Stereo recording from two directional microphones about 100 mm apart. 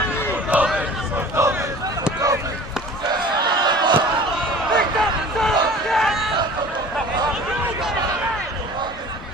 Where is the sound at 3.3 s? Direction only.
45° right (ahead or behind).